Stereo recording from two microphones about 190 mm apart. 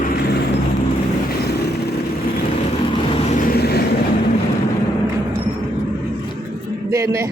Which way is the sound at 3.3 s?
55° left (ahead or behind).